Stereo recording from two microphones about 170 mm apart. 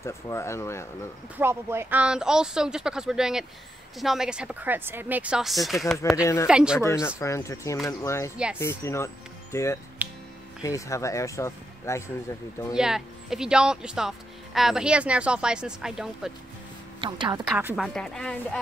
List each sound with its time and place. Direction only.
0.0 s speech: 15° left (ahead or behind)
1.4 s speech: 15° right (ahead or behind)
6.8 s speech: 15° left (ahead or behind)
10.0 s music: 10° right (ahead or behind)
10.6 s speech: 20° left (ahead or behind)
12.7 s speech: 5° right (ahead or behind)
17.0 s a woman's voice: 25° right (ahead or behind)
17.7 s speech: centre (ahead or behind)